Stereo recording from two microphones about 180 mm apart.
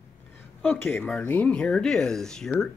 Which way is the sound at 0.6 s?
10° left (ahead or behind).